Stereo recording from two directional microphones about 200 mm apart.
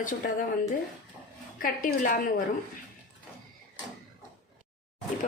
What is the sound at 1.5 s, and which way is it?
Speech, 45° left (ahead or behind).